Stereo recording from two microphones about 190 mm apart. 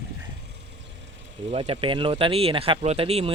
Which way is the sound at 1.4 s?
30° right (ahead or behind).